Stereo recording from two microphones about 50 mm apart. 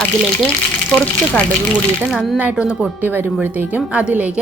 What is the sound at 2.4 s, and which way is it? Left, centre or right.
Speech, right.